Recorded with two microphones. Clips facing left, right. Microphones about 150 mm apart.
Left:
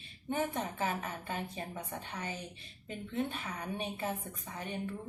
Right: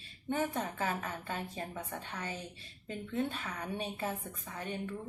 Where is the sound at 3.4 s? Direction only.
20° left (ahead or behind).